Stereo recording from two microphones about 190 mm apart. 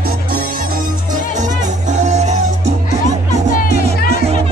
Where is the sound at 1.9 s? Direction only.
40° right (ahead or behind).